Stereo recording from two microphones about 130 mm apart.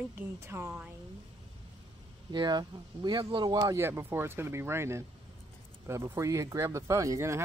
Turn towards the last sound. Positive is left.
turn(degrees=-25)  # may be behind; listen again after turning